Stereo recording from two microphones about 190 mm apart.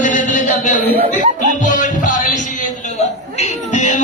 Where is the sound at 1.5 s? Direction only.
40° left (ahead or behind).